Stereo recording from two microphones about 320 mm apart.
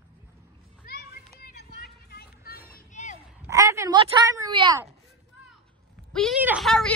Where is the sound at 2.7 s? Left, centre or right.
Left.